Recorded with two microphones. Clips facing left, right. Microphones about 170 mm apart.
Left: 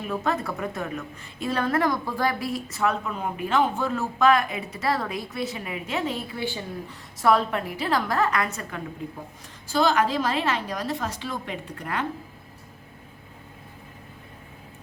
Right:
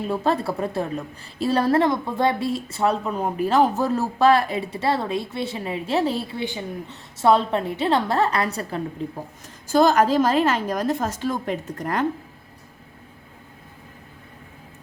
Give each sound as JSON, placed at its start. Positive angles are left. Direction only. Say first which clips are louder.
{"t": 0.1, "sound": "a woman's voice", "louder": "right 3 dB", "side_deg": -30}
{"t": 6.4, "sound": "a woman's voice", "louder": "right 2 dB", "side_deg": -20}
{"t": 9.6, "sound": "a woman's voice", "louder": "right 5 dB", "side_deg": -45}